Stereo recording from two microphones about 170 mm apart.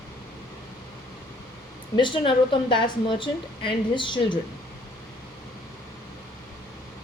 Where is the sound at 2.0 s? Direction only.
30° left (ahead or behind).